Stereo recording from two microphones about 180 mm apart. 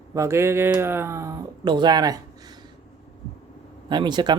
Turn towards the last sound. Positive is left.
turn(degrees=-25)  # may be behind; listen again after turning